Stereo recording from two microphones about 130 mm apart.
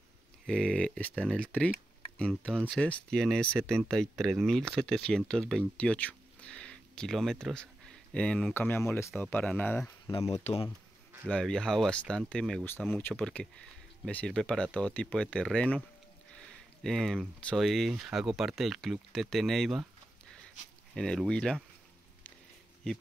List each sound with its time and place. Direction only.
0.5 s speech: 5° left (ahead or behind)
10.2 s speech: 55° left (ahead or behind)
11.2 s speech: 5° left (ahead or behind)
12.6 s speech: 15° left (ahead or behind)
20.9 s speech: 5° left (ahead or behind)